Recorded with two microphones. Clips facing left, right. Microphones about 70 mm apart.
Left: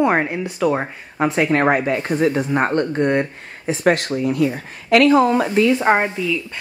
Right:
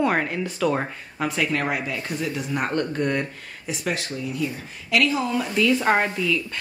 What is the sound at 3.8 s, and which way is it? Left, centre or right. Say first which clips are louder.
Speech: left 11 dB; left.